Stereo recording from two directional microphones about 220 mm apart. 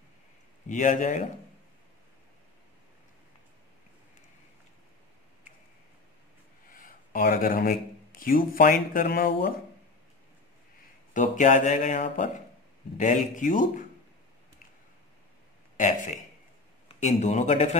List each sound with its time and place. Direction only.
0.7 s speech: 35° left (ahead or behind)
6.7 s speech: 40° left (ahead or behind)
11.1 s speech: 35° left (ahead or behind)
16.8 s speech: 30° left (ahead or behind)